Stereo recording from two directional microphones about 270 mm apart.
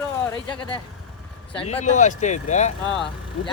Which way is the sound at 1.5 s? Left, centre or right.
Left.